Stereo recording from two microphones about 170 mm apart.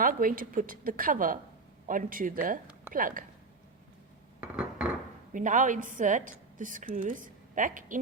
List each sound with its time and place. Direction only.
0.0 s a woman's voice: 55° right (ahead or behind)
4.4 s dishes: 5° right (ahead or behind)
5.3 s a woman's voice: 50° right (ahead or behind)